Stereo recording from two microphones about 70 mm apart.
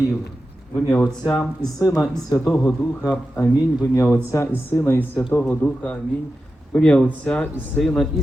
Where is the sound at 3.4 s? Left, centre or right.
Left.